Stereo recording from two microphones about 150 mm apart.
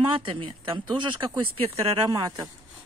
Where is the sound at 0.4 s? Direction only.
30° right (ahead or behind).